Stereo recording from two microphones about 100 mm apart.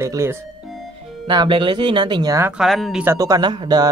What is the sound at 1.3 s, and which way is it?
Speech, 50° right (ahead or behind).